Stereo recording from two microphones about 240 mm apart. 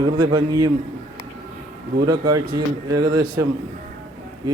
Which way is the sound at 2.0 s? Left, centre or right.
Centre.